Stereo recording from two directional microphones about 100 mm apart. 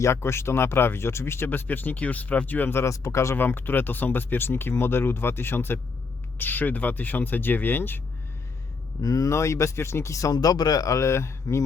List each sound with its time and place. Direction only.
0.0 s speech: 25° left (ahead or behind)
9.0 s speech: 35° left (ahead or behind)